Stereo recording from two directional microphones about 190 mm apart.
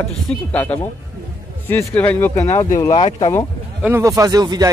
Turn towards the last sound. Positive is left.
turn(degrees=-20)  # may be behind; listen again after turning